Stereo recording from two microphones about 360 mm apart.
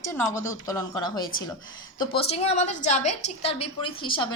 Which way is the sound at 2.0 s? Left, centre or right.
Centre.